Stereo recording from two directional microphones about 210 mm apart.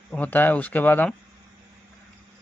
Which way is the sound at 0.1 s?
10° left (ahead or behind).